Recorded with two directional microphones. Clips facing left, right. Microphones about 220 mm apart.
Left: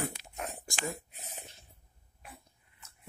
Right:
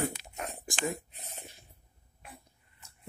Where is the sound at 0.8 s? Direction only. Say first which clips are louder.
Right 4 dB; centre (ahead or behind).